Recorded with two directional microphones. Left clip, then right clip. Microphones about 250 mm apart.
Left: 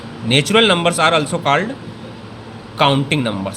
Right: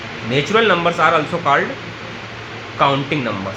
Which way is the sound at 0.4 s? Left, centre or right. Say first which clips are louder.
Even; left.